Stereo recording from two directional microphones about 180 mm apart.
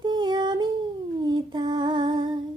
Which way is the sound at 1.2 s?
25° right (ahead or behind).